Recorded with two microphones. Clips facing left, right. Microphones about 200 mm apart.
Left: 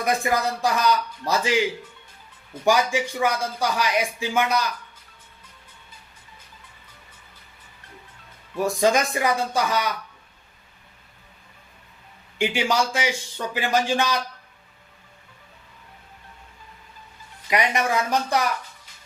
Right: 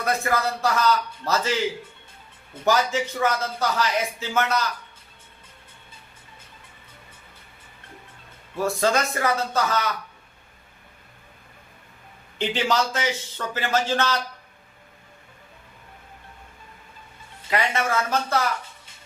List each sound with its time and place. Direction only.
0.0 s speech: 15° left (ahead or behind)
2.6 s speech: 10° left (ahead or behind)
8.5 s speech: 15° left (ahead or behind)
12.4 s speech: 10° left (ahead or behind)
17.5 s speech: 15° left (ahead or behind)